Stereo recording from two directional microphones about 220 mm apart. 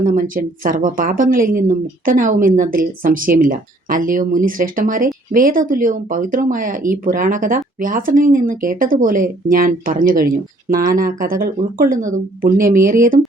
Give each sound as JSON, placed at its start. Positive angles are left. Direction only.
{"t": 0.0, "sound": "speech", "side_deg": -40}